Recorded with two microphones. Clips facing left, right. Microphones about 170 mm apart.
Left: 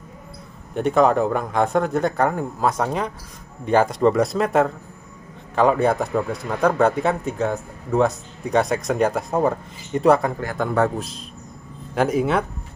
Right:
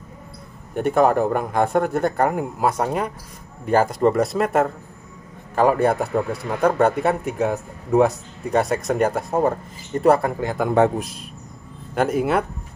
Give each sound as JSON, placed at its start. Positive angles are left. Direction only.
{"t": 0.7, "sound": "a man's voice", "side_deg": -5}
{"t": 10.7, "sound": "a man's voice", "side_deg": -15}
{"t": 11.9, "sound": "a man's voice", "side_deg": 0}